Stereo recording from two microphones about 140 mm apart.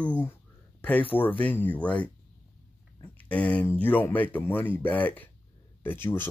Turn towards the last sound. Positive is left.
turn(degrees=15)  # may be behind; listen again after turning